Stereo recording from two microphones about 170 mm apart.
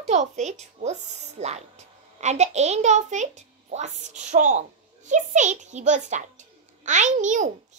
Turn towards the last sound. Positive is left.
turn(degrees=-45)  # may be behind; listen again after turning